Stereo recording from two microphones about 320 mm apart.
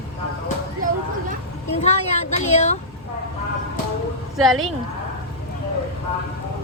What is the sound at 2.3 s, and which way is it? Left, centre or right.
Speech, left.